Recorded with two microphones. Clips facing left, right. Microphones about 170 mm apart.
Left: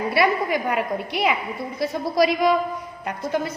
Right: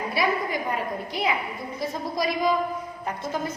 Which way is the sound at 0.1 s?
70° left (ahead or behind).